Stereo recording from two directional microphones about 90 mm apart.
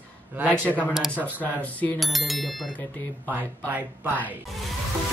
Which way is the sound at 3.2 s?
20° right (ahead or behind).